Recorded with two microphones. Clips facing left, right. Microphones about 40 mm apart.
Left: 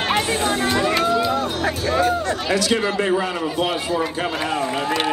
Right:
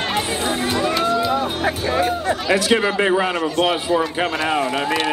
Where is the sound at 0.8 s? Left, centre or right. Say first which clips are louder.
Right 2 dB; centre.